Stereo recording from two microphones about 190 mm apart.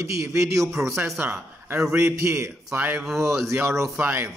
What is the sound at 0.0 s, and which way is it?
A man's voice, 15° right (ahead or behind).